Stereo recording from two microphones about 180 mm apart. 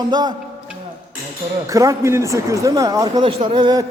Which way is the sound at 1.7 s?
15° right (ahead or behind).